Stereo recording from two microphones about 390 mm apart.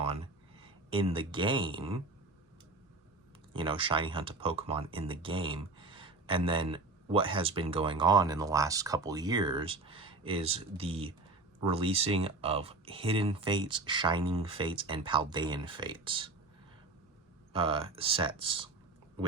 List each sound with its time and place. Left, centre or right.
0.6 s speech: centre
3.5 s speech: centre
17.5 s speech: centre